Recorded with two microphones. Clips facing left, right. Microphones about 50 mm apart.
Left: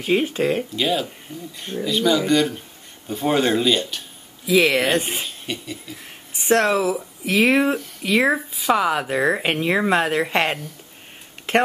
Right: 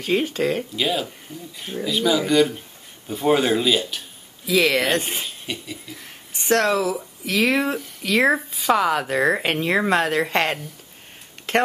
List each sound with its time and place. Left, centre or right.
0.0 s speech: centre
0.7 s speech: centre
4.6 s speech: centre
4.8 s speech: centre
6.3 s speech: centre
7.7 s speech: centre